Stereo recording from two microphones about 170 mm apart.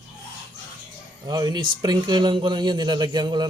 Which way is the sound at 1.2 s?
20° right (ahead or behind).